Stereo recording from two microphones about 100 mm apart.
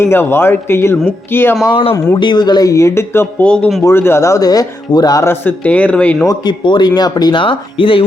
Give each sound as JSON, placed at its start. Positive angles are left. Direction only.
{"t": 0.0, "sound": "a man's voice", "side_deg": 25}
{"t": 1.7, "sound": "speech", "side_deg": 70}
{"t": 2.1, "sound": "speech", "side_deg": 50}
{"t": 3.4, "sound": "speech", "side_deg": 10}
{"t": 3.8, "sound": "speech", "side_deg": 25}
{"t": 5.2, "sound": "speech", "side_deg": 20}
{"t": 6.2, "sound": "speech", "side_deg": 45}